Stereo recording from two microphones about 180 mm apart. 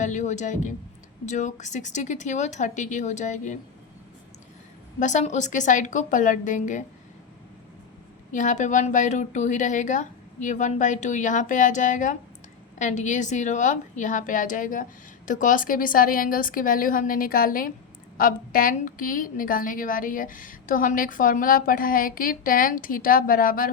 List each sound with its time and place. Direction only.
0.0 s a woman's voice: 45° left (ahead or behind)
4.9 s a woman's voice: 45° left (ahead or behind)
8.3 s a woman's voice: 45° left (ahead or behind)